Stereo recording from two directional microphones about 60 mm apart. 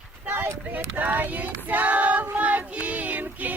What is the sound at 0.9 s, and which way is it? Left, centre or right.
Child singing, right.